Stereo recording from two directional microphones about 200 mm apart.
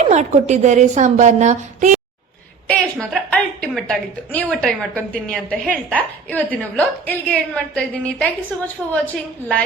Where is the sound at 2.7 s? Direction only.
5° left (ahead or behind).